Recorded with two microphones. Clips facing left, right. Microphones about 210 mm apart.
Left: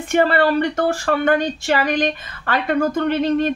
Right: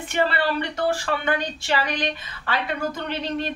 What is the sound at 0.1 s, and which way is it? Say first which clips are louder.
Speech: left 7 dB; 50° left (ahead or behind).